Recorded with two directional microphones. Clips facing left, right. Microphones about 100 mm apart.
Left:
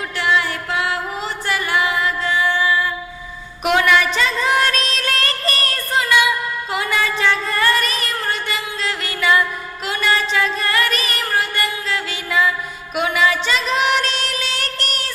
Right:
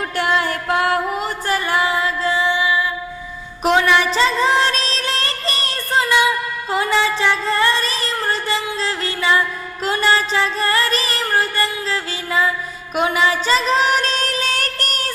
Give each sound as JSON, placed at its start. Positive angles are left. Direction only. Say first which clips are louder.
{"t": 0.2, "sound": "music", "louder": "even", "side_deg": -40}
{"t": 1.5, "sound": "music", "louder": "right 1 dB", "side_deg": -35}
{"t": 2.5, "sound": "music", "louder": "even", "side_deg": -15}
{"t": 3.8, "sound": "music", "louder": "even", "side_deg": -25}